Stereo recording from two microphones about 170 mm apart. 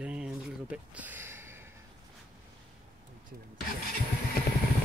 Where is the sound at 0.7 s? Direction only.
10° right (ahead or behind).